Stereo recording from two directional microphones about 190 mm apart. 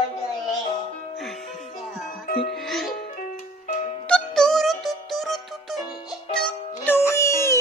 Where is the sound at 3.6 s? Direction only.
35° left (ahead or behind).